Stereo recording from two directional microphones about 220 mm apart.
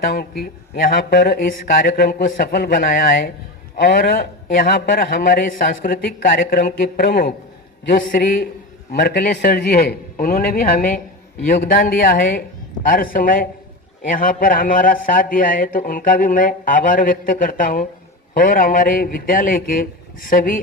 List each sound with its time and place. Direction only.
0.0 s a man's voice: 45° left (ahead or behind)